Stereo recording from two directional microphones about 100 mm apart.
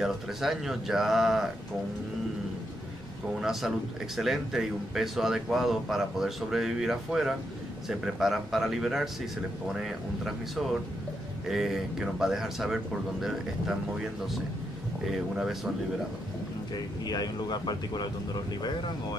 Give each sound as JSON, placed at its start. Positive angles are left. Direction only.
{"t": 0.0, "sound": "speech", "side_deg": -5}
{"t": 3.3, "sound": "speech", "side_deg": -5}
{"t": 17.0, "sound": "speech", "side_deg": 40}